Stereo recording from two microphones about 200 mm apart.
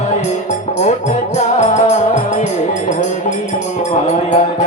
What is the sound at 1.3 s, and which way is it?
Music, 35° left (ahead or behind).